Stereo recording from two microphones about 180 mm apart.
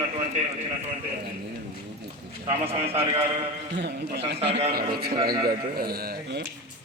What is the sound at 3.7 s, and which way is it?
Speech, 70° right (ahead or behind).